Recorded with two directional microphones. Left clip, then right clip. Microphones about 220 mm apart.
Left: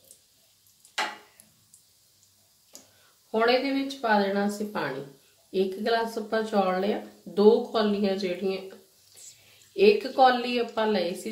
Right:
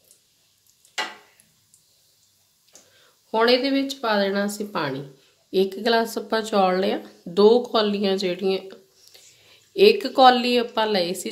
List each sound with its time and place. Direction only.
3.3 s speech: 50° right (ahead or behind)
9.8 s speech: 50° right (ahead or behind)